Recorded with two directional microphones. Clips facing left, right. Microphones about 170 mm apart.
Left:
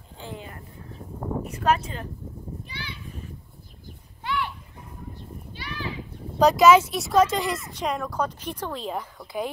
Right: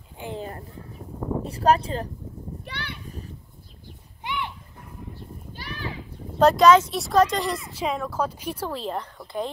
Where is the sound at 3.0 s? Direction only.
40° right (ahead or behind).